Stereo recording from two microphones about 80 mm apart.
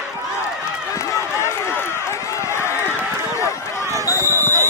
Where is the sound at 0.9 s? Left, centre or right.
Left.